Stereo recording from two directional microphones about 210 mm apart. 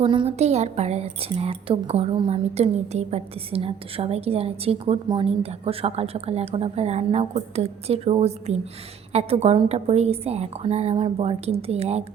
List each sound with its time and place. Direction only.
0.0 s a woman's voice: 25° right (ahead or behind)